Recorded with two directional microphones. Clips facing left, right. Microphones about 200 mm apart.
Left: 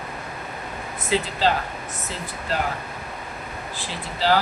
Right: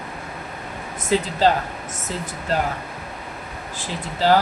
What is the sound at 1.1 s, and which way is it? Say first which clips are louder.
Speech: right 3 dB; 45° right (ahead or behind).